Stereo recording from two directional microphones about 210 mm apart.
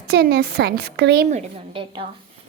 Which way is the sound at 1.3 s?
25° right (ahead or behind).